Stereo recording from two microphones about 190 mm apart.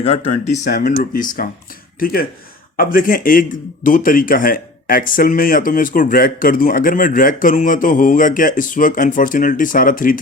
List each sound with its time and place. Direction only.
0.3 s speech: 40° left (ahead or behind)